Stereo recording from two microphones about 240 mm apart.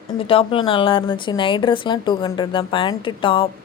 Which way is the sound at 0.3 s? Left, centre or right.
Left.